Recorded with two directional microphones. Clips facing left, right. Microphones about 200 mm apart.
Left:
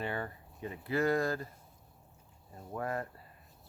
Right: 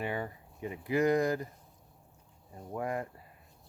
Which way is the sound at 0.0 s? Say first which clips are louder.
Right 2 dB; 15° right (ahead or behind).